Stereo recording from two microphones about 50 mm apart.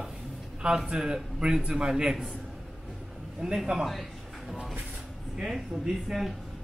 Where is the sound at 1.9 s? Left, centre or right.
Centre.